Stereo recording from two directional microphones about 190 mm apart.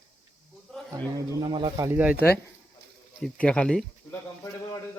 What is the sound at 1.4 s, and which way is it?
Speech, 25° right (ahead or behind).